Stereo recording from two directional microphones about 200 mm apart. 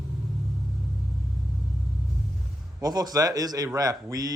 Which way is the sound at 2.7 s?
20° right (ahead or behind).